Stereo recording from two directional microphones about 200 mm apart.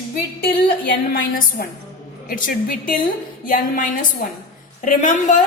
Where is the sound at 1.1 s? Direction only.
45° left (ahead or behind).